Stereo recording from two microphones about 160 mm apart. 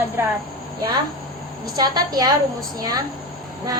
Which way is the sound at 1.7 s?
25° right (ahead or behind).